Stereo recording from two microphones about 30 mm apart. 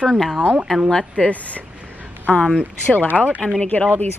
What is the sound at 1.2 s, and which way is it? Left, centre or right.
Speech, left.